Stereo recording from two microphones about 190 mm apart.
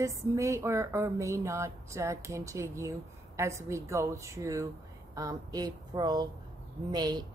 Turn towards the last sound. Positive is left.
turn(degrees=-20)  # may be behind; listen again after turning